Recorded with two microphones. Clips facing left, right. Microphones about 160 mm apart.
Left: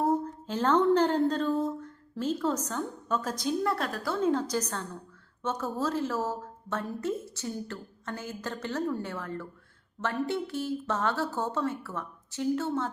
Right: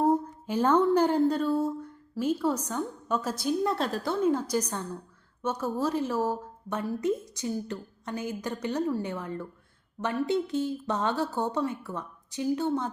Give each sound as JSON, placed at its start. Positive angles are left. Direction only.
{"t": 0.0, "sound": "speech", "side_deg": -10}
{"t": 3.6, "sound": "a woman's voice", "side_deg": -20}
{"t": 4.2, "sound": "a woman's voice", "side_deg": -10}